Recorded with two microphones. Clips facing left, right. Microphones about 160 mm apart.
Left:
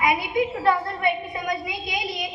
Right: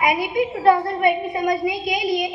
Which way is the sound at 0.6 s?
25° right (ahead or behind).